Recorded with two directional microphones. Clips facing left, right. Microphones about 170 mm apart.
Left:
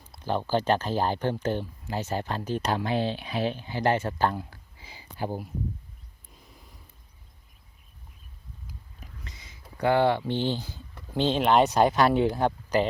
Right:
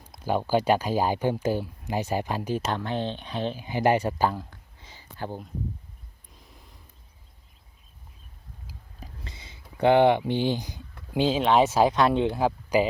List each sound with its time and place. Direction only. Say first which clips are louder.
0.0 s speech: right 2 dB; 10° right (ahead or behind)
2.7 s speech: left 2 dB; 10° left (ahead or behind)
3.6 s speech: right 7 dB; 15° right (ahead or behind)
4.3 s speech: even; 5° left (ahead or behind)
4.8 s a sound: left 3 dB; 10° left (ahead or behind)
9.0 s whispering: right 6 dB; 30° right (ahead or behind)
9.7 s speech: right 4 dB; 20° right (ahead or behind); by 12.8 s 5° right (ahead or behind)